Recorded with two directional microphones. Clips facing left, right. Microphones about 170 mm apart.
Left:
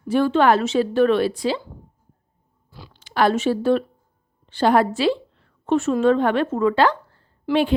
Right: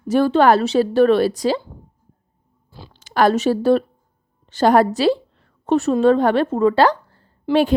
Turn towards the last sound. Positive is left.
turn(degrees=-40)  # may be behind; listen again after turning